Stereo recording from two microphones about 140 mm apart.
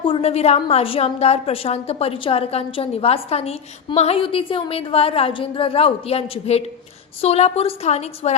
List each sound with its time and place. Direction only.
0.0 s a woman's voice: 45° left (ahead or behind)